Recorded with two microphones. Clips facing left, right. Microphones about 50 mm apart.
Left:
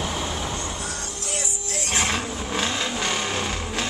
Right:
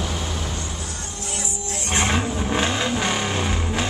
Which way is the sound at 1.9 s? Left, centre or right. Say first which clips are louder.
Right 3 dB; centre.